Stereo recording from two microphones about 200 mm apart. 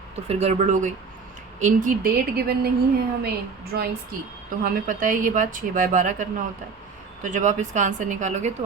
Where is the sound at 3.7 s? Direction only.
55° right (ahead or behind).